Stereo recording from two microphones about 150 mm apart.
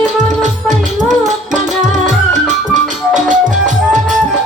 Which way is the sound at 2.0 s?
55° right (ahead or behind).